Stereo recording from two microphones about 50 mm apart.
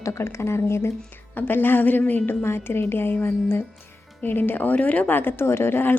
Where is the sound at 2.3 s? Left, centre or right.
Left.